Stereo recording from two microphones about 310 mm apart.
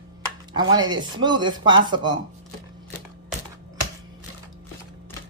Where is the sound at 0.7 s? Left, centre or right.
Centre.